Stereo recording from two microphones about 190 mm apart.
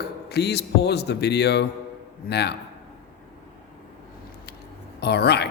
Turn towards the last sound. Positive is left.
turn(degrees=60)  # may be behind; listen again after turning